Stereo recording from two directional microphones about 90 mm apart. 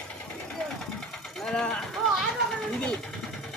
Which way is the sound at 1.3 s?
5° left (ahead or behind).